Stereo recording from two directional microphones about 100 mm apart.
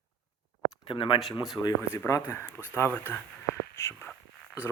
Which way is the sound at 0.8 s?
60° left (ahead or behind).